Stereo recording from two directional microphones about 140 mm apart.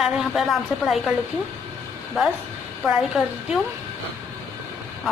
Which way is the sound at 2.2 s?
Centre (ahead or behind).